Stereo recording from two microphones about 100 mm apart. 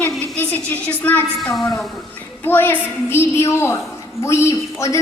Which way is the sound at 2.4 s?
20° left (ahead or behind).